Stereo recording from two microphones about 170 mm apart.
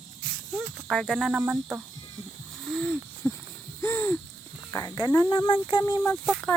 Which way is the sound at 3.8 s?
15° left (ahead or behind).